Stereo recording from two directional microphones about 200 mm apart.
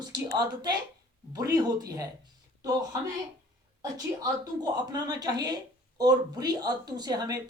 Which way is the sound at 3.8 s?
20° right (ahead or behind).